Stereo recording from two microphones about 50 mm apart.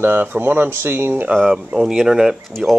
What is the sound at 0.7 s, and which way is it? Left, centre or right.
Speech, right.